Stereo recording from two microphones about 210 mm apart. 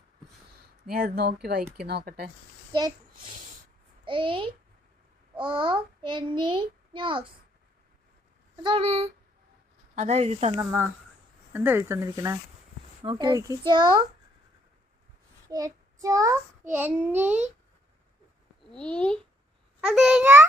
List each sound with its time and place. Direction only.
0.9 s speech: 45° right (ahead or behind)
4.0 s a child's voice: 25° right (ahead or behind)
8.6 s a child's voice: 25° right (ahead or behind)
10.6 s a child's voice: 10° right (ahead or behind)
15.4 s child singing: 15° right (ahead or behind)
16.7 s speech: 10° right (ahead or behind)
18.7 s a child's voice: 5° left (ahead or behind)